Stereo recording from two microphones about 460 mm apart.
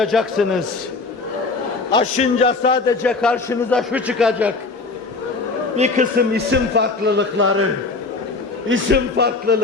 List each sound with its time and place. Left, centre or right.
0.0 s a man's voice: centre
1.9 s a man's voice: centre
5.7 s a man's voice: centre